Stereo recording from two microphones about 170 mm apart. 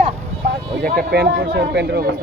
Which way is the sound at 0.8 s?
60° right (ahead or behind).